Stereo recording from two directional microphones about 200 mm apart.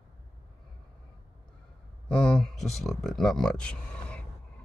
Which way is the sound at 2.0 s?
5° left (ahead or behind).